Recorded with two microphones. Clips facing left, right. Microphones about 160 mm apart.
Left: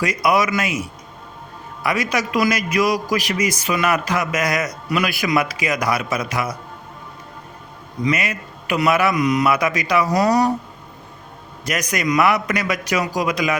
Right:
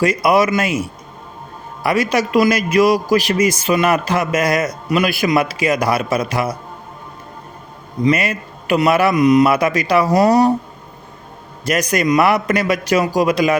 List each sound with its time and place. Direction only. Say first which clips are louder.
0.0 s a man's voice: right 4 dB; 30° right (ahead or behind)
8.0 s a man's voice: right 5 dB; 30° right (ahead or behind)
11.6 s a man's voice: right 5 dB; 30° right (ahead or behind)